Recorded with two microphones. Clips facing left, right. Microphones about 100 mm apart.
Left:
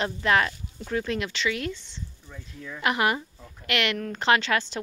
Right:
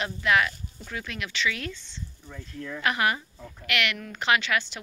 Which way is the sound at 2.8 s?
25° left (ahead or behind).